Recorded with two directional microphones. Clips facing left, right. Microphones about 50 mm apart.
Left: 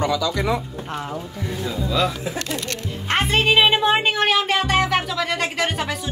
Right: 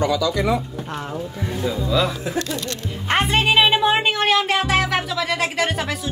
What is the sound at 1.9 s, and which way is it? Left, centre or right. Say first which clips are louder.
Speech: even; centre.